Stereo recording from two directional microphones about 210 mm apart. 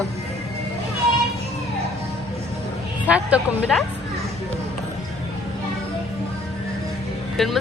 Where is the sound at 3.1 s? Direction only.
5° right (ahead or behind).